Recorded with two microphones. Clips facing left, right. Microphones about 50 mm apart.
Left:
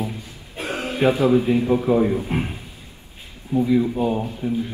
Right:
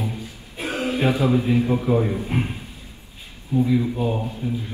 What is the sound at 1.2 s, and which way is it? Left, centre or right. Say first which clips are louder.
A man's voice: left 2 dB; centre.